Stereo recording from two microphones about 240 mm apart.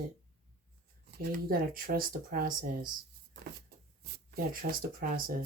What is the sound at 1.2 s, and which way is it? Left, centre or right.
Speech, right.